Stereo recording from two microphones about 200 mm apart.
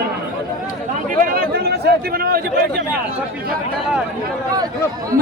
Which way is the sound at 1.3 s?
45° right (ahead or behind).